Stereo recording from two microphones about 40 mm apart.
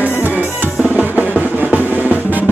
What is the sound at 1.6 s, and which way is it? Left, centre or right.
Drum, right.